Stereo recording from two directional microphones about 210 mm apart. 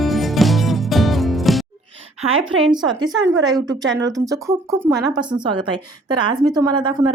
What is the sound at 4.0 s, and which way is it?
Speech, 15° right (ahead or behind).